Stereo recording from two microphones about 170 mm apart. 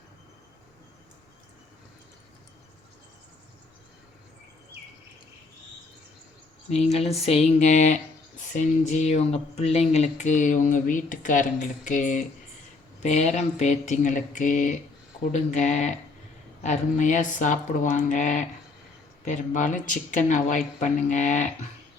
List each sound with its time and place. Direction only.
6.7 s speech: 40° left (ahead or behind)